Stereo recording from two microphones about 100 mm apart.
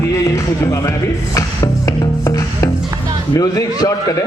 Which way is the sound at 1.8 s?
35° left (ahead or behind).